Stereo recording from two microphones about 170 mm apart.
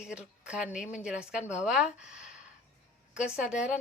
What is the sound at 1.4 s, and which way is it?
Speech, 45° left (ahead or behind).